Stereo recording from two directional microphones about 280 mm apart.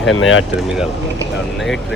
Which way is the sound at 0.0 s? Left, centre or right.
Left.